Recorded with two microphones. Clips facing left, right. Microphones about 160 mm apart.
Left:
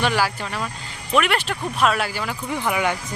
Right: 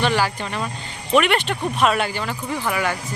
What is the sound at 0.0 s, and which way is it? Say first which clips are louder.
Speech: right 1 dB; 10° left (ahead or behind).